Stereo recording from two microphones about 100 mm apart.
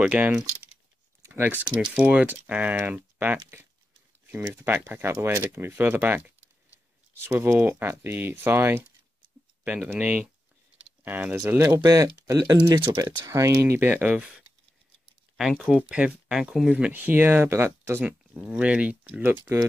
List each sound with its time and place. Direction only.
0.0 s speech: 10° right (ahead or behind)
1.2 s a sound: 20° right (ahead or behind)
1.8 s speech: 15° right (ahead or behind)
4.6 s speech: 20° right (ahead or behind)
9.9 s speech: 10° right (ahead or behind); by 12.9 s 45° right (ahead or behind)
12.9 s speech: 30° right (ahead or behind); by 14.3 s 15° right (ahead or behind)
15.6 s speech: 5° right (ahead or behind)
16.9 s speech: 20° right (ahead or behind)
18.0 s speech: 10° right (ahead or behind)